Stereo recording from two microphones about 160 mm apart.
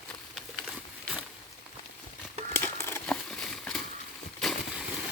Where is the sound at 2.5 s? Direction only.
15° left (ahead or behind).